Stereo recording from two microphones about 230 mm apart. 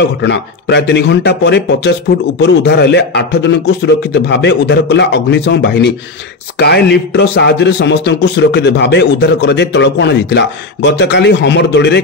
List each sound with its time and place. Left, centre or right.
0.2 s a man's voice: left